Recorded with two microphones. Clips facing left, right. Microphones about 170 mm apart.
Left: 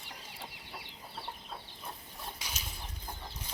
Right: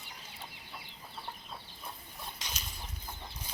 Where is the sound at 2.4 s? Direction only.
10° left (ahead or behind).